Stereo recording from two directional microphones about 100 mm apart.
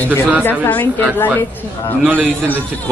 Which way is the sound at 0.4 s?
20° left (ahead or behind).